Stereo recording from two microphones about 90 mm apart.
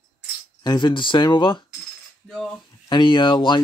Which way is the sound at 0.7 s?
55° left (ahead or behind).